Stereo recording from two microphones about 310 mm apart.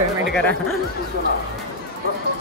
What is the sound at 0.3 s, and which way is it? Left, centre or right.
Speech, centre.